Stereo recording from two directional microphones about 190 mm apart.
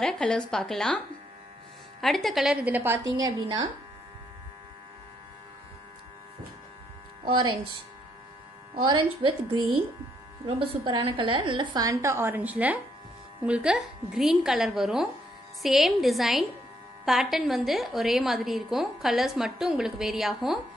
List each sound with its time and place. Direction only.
0.0 s a woman's voice: 5° left (ahead or behind); by 3.6 s 20° right (ahead or behind)
7.2 s a woman's voice: 25° right (ahead or behind)
10.4 s a woman's voice: 30° right (ahead or behind); by 20.5 s centre (ahead or behind)